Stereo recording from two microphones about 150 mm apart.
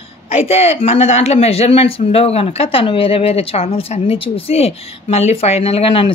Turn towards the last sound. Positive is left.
turn(degrees=40)  # may be behind; listen again after turning